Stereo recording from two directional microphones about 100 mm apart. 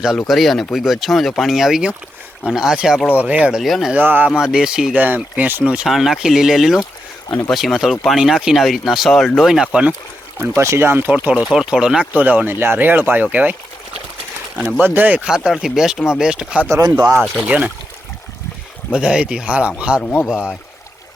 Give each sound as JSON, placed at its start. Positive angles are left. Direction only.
{"t": 0.2, "sound": "speech", "side_deg": 0}
{"t": 3.6, "sound": "speech", "side_deg": 0}
{"t": 3.9, "sound": "speech", "side_deg": -20}
{"t": 4.4, "sound": "speech", "side_deg": -5}
{"t": 7.3, "sound": "speech", "side_deg": 30}
{"t": 7.5, "sound": "speech", "side_deg": -5}
{"t": 10.6, "sound": "speech", "side_deg": -25}
{"t": 14.8, "sound": "speech", "side_deg": -20}
{"t": 16.6, "sound": "speech", "side_deg": -30}
{"t": 18.9, "sound": "speech", "side_deg": -10}